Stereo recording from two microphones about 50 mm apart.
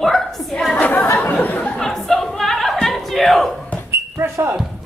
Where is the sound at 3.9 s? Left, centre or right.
Right.